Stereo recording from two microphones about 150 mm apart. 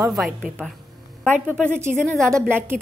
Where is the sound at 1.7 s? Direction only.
15° right (ahead or behind).